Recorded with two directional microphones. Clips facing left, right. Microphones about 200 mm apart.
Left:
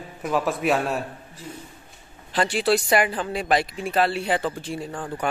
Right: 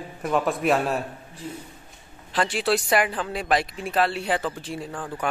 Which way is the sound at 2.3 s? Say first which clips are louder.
Left 2 dB; centre (ahead or behind).